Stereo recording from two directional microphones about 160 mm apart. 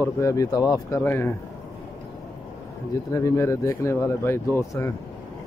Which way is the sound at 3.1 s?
20° left (ahead or behind).